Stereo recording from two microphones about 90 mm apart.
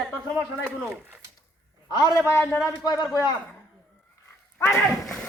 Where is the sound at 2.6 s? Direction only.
45° left (ahead or behind).